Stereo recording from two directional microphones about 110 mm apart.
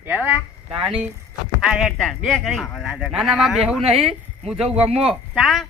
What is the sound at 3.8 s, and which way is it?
Speech, 60° right (ahead or behind).